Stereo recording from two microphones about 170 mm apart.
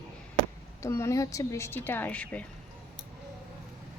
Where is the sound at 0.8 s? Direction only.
15° left (ahead or behind).